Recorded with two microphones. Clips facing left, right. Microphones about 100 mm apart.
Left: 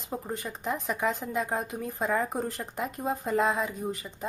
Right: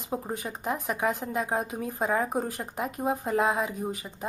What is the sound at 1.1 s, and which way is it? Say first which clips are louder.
Speech: right 1 dB; centre (ahead or behind).